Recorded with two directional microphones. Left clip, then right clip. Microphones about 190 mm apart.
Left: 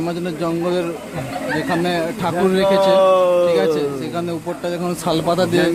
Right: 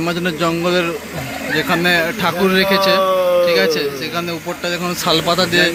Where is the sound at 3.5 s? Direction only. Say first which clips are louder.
Right 2 dB; 15° left (ahead or behind).